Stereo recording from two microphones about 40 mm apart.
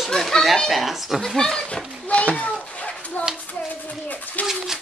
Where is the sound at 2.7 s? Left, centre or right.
Left.